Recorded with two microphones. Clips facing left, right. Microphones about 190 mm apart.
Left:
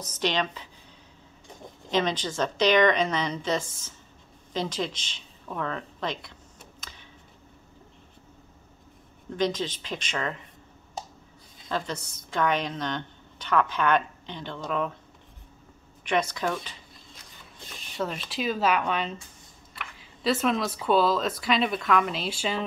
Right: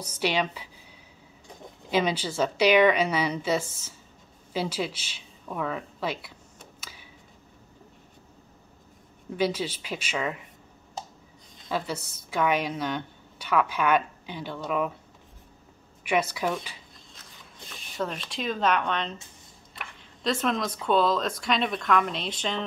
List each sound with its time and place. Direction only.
0.0 s a woman's voice: 10° right (ahead or behind)
1.9 s a woman's voice: 10° right (ahead or behind)
6.8 s a sound: 5° right (ahead or behind)
9.4 s a woman's voice: 10° right (ahead or behind)
11.7 s a woman's voice: 10° right (ahead or behind)
16.0 s a woman's voice: 10° right (ahead or behind)
17.9 s speech: centre (ahead or behind)